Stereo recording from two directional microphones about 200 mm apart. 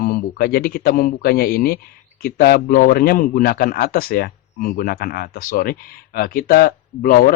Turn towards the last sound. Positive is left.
turn(degrees=45)  # may be behind; listen again after turning